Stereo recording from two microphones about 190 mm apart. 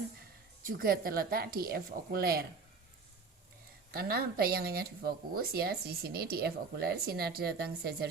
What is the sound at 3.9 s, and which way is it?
Speech, 55° right (ahead or behind).